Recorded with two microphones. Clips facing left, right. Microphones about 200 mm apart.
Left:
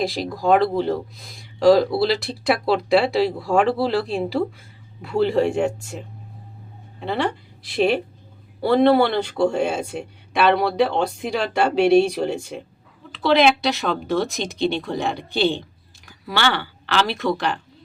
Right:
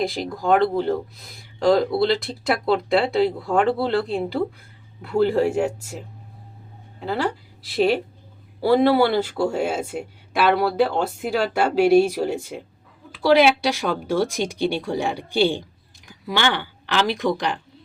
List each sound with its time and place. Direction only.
0.0 s speech: centre (ahead or behind)
7.0 s speech: centre (ahead or behind)